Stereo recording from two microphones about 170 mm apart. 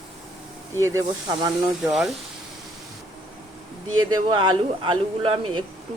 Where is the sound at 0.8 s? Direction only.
20° right (ahead or behind).